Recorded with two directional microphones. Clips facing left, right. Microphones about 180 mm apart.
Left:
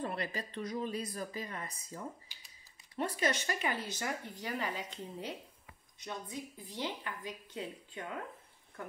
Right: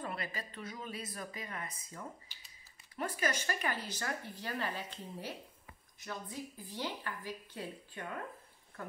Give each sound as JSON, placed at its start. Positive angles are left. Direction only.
{"t": 0.0, "sound": "speech", "side_deg": 30}
{"t": 3.0, "sound": "speech", "side_deg": 25}